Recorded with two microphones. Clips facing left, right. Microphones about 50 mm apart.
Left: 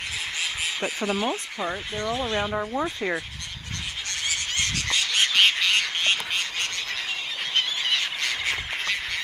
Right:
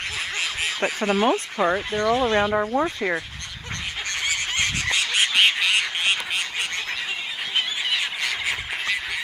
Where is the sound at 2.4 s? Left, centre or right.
Right.